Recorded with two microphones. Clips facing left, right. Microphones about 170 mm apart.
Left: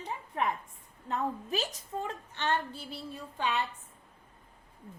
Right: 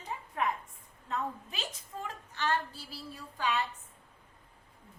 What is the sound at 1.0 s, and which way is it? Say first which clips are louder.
A woman's voice: left 3 dB; 35° left (ahead or behind).